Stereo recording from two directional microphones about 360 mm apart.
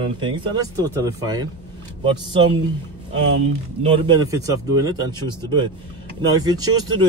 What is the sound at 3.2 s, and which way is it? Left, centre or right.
Speech, right.